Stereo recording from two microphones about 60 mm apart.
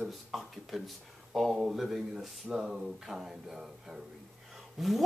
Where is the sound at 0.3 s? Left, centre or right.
Centre.